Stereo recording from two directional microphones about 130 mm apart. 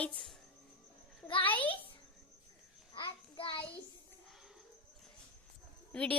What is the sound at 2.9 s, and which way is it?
Child singing, 40° left (ahead or behind).